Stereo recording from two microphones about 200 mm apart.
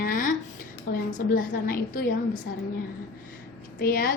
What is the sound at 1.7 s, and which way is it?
Speech, 45° left (ahead or behind).